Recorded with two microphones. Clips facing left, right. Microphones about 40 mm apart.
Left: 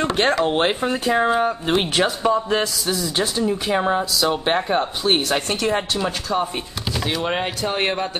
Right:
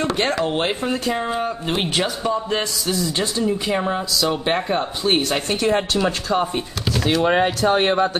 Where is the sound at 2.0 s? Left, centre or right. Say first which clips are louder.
Left 3 dB; centre.